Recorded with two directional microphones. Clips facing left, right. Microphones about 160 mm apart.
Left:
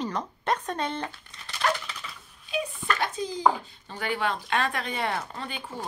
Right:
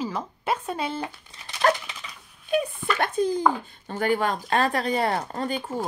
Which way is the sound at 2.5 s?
55° right (ahead or behind).